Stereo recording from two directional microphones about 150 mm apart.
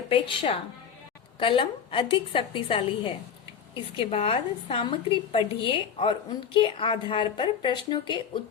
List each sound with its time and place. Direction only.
0.1 s a woman's voice: 40° left (ahead or behind)